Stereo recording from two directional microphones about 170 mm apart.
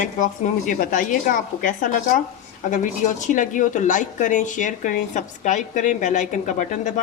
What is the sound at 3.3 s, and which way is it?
Dishes, 50° left (ahead or behind).